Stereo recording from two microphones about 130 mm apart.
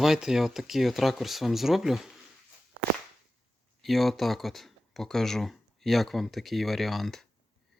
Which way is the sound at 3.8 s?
Centre (ahead or behind).